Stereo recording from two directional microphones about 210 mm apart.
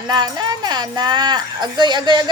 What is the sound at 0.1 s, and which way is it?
Speech, 20° right (ahead or behind).